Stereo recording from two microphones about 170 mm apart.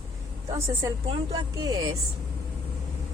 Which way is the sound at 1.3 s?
20° right (ahead or behind).